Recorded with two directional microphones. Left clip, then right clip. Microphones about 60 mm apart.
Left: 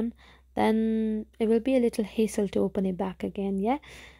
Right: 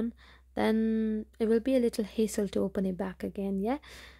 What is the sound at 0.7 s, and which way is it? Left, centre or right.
Speech, right.